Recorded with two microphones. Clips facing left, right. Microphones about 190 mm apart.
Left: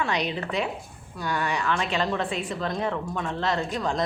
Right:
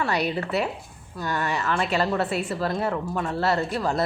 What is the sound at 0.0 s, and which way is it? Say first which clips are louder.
Speech: right 2 dB; 5° right (ahead or behind).